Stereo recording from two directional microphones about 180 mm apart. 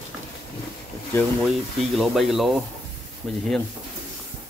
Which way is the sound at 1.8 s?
Centre (ahead or behind).